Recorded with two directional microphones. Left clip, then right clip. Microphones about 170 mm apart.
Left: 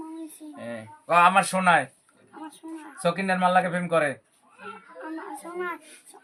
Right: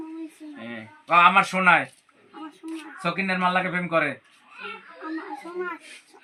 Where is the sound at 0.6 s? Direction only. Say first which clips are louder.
Left 3 dB; 75° left (ahead or behind); by 1.8 s 90° left.